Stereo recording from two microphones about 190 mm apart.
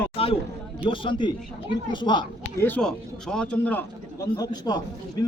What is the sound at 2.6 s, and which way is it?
A man's voice, 5° left (ahead or behind).